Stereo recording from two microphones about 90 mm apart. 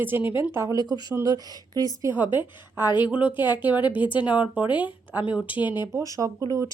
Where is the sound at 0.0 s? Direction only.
20° right (ahead or behind).